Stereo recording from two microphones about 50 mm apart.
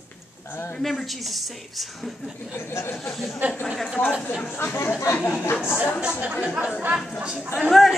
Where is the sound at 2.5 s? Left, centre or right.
Left.